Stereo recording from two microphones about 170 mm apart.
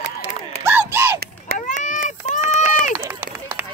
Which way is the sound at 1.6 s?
50° left (ahead or behind).